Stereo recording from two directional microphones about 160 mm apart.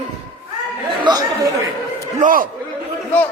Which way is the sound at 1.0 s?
25° right (ahead or behind).